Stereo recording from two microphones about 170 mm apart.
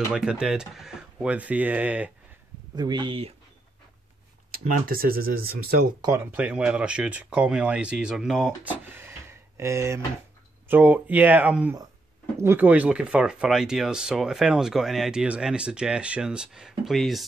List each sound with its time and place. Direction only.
0.1 s speech: 5° right (ahead or behind)
2.7 s speech: 25° right (ahead or behind)
4.9 s speech: 60° right (ahead or behind)
5.9 s speech: 15° right (ahead or behind); by 17.2 s centre (ahead or behind)